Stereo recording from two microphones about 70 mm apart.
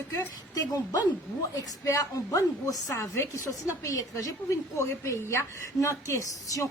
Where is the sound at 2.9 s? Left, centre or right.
Left.